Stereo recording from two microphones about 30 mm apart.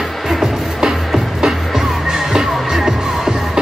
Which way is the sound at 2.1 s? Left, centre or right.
Centre.